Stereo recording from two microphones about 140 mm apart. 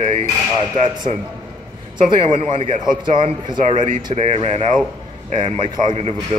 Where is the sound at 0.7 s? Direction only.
35° right (ahead or behind).